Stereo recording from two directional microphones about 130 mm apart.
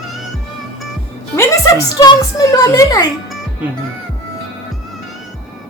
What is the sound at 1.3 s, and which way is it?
A woman's voice, 20° left (ahead or behind).